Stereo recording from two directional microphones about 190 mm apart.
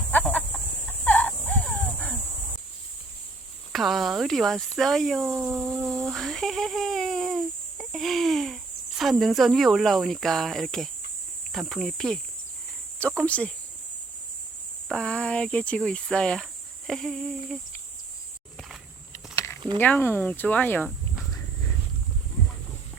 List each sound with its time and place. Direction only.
0.1 s chicken: 10° left (ahead or behind)
3.7 s speech: centre (ahead or behind)
5.9 s speech: centre (ahead or behind)
14.8 s speech: 5° left (ahead or behind)
19.5 s a sound: 25° right (ahead or behind)
19.8 s speech: 10° left (ahead or behind)